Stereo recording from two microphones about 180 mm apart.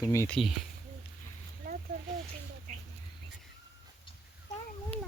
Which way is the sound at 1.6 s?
60° right (ahead or behind).